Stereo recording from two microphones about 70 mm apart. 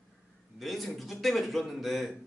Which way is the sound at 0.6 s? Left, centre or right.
Centre.